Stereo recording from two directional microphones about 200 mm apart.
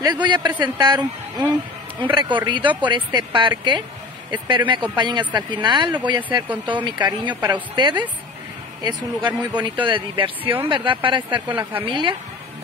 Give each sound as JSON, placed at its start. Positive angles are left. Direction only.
{"t": 0.0, "sound": "speech", "side_deg": -20}